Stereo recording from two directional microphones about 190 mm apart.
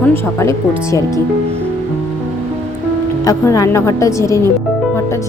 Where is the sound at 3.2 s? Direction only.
15° left (ahead or behind).